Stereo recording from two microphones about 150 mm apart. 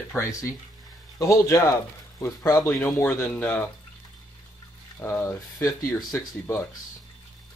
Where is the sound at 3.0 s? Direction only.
10° left (ahead or behind).